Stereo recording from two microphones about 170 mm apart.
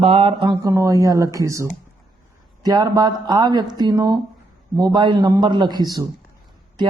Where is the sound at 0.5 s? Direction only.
15° right (ahead or behind).